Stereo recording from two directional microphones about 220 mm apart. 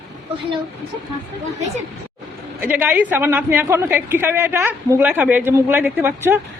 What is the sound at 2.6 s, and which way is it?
A woman's voice, 10° right (ahead or behind).